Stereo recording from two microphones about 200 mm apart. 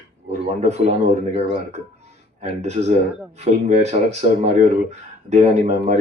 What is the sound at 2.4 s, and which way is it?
Speech, 35° right (ahead or behind).